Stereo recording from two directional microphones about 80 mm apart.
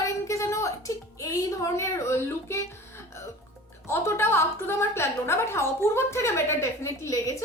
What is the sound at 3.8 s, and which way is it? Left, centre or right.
A woman's voice, left.